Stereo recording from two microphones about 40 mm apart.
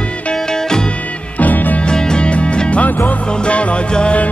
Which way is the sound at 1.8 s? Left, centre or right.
Left.